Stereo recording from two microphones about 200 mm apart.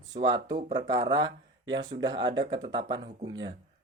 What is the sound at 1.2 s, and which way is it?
Speech, 65° right (ahead or behind).